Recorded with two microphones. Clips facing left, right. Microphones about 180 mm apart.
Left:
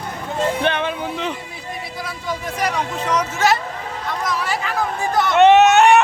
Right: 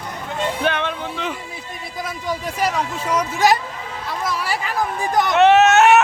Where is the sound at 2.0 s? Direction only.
15° right (ahead or behind).